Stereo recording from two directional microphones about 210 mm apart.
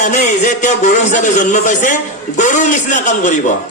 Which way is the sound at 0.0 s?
35° left (ahead or behind).